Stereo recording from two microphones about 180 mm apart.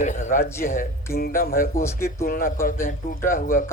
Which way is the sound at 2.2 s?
50° left (ahead or behind).